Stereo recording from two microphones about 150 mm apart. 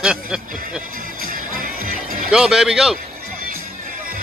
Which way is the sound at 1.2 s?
70° right (ahead or behind).